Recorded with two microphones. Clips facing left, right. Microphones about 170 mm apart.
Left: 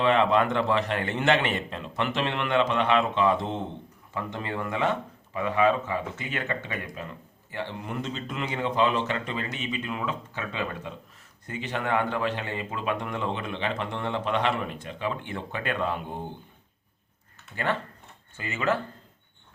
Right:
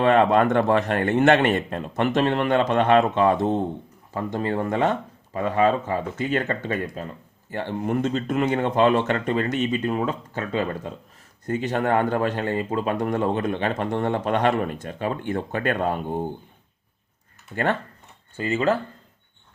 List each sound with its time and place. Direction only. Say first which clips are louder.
0.0 s speech: right 5 dB; 50° right (ahead or behind)
17.5 s speech: right 5 dB; 50° right (ahead or behind)
18.3 s speech: right 6 dB; 35° right (ahead or behind)